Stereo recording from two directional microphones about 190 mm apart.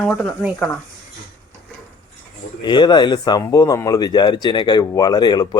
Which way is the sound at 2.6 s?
25° left (ahead or behind).